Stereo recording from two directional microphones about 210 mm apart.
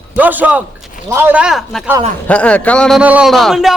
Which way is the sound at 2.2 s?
5° left (ahead or behind).